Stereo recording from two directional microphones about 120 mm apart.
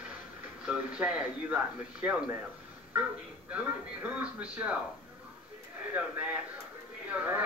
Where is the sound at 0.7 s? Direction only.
10° right (ahead or behind).